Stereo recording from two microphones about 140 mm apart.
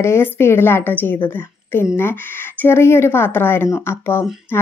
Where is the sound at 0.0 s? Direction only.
20° left (ahead or behind).